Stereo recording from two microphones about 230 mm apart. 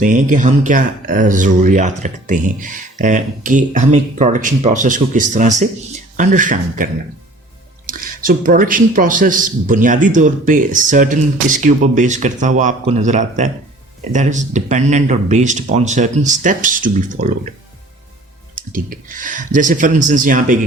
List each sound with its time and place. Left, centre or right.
0.0 s a man's voice: right
7.9 s a man's voice: right
18.5 s a man's voice: right